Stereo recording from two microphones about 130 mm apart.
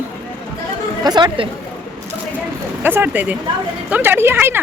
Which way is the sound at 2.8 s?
15° right (ahead or behind).